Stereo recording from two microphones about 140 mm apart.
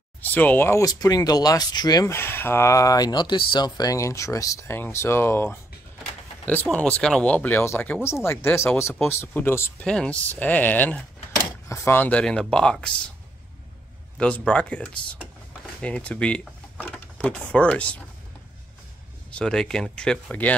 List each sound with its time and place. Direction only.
0.2 s speech: 10° left (ahead or behind)
14.1 s speech: 10° left (ahead or behind)
19.3 s speech: 5° left (ahead or behind)